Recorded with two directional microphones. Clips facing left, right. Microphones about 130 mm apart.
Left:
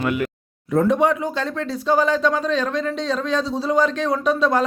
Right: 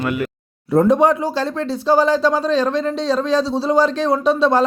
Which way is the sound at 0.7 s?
35° right (ahead or behind).